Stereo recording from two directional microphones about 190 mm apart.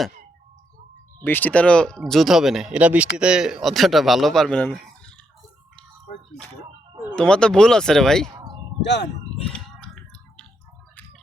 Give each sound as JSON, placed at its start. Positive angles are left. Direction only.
{"t": 1.2, "sound": "speech", "side_deg": 10}
{"t": 7.2, "sound": "speech", "side_deg": 5}
{"t": 8.8, "sound": "speech", "side_deg": 65}
{"t": 9.5, "sound": "a sound", "side_deg": 5}